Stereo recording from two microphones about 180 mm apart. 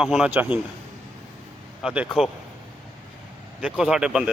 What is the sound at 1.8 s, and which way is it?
Speech, 5° right (ahead or behind).